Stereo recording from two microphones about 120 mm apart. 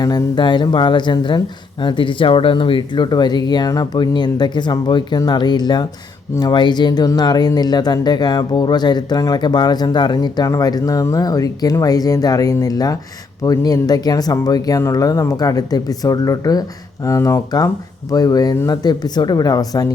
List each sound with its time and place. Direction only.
0.0 s speech: 35° left (ahead or behind)